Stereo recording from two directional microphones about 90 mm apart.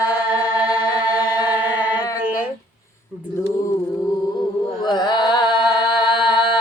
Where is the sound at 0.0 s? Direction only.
45° left (ahead or behind).